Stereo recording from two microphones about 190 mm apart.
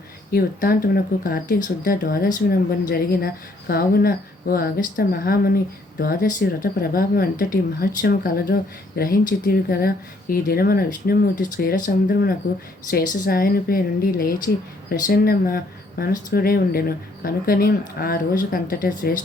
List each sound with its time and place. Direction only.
0.3 s a woman's voice: 50° left (ahead or behind)